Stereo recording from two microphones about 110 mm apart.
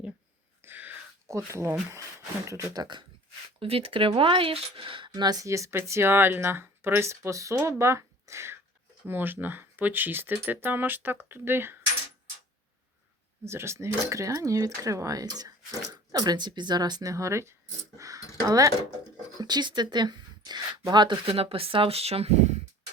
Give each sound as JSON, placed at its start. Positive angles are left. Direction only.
{"t": 0.6, "sound": "whispering", "side_deg": -15}
{"t": 1.3, "sound": "speech", "side_deg": -25}
{"t": 3.6, "sound": "speech", "side_deg": -60}
{"t": 13.4, "sound": "speech", "side_deg": -25}
{"t": 21.3, "sound": "speech", "side_deg": -60}